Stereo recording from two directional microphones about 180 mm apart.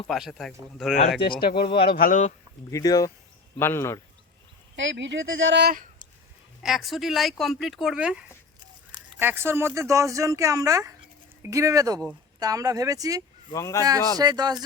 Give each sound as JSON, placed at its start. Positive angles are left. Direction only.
{"t": 0.1, "sound": "speech", "side_deg": 0}
{"t": 1.4, "sound": "speech", "side_deg": 60}
{"t": 2.6, "sound": "speech", "side_deg": 20}
{"t": 4.8, "sound": "speech", "side_deg": -90}
{"t": 6.6, "sound": "speech", "side_deg": 0}
{"t": 13.5, "sound": "speech", "side_deg": 15}
{"t": 14.2, "sound": "speech", "side_deg": -20}